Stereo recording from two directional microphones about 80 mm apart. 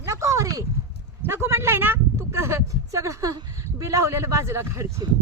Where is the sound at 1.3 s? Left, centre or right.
Right.